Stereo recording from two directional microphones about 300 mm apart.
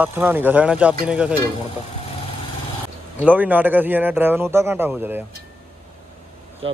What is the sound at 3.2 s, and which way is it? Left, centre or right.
Speech, centre.